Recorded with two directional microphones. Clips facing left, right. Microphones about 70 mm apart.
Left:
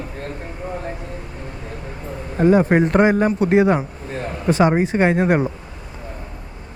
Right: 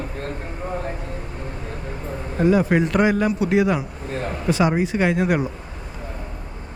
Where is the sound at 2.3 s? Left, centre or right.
Left.